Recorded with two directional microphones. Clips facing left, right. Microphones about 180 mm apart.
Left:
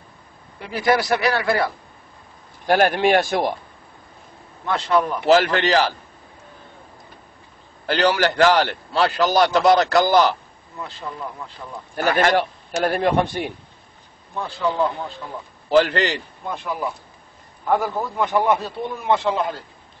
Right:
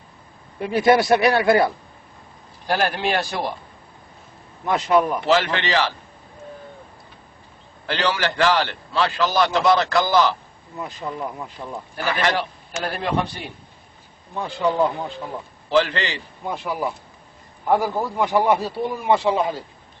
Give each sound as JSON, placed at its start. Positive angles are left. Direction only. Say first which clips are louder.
{"t": 0.6, "sound": "a man's voice", "louder": "right 4 dB", "side_deg": -25}
{"t": 2.6, "sound": "a man's voice", "louder": "left 5 dB", "side_deg": 55}
{"t": 4.6, "sound": "a man's voice", "louder": "right 2 dB", "side_deg": -15}
{"t": 5.3, "sound": "a man's voice", "louder": "left 5 dB", "side_deg": 45}
{"t": 7.8, "sound": "a man's voice", "louder": "left 4 dB", "side_deg": 40}
{"t": 10.8, "sound": "a man's voice", "louder": "right 3 dB", "side_deg": -15}
{"t": 11.9, "sound": "a man's voice", "louder": "left 5 dB", "side_deg": 45}
{"t": 14.3, "sound": "a man's voice", "louder": "right 1 dB", "side_deg": -15}
{"t": 15.7, "sound": "a man's voice", "louder": "left 3 dB", "side_deg": 45}
{"t": 16.4, "sound": "a man's voice", "louder": "right 2 dB", "side_deg": -10}